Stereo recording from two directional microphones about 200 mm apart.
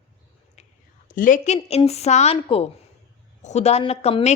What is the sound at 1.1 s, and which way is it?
A woman's voice, 40° left (ahead or behind).